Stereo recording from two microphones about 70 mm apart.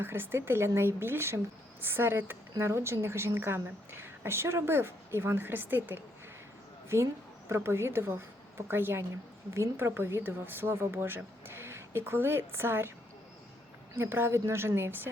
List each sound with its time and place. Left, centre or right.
0.0 s a woman's voice: right
13.9 s a woman's voice: right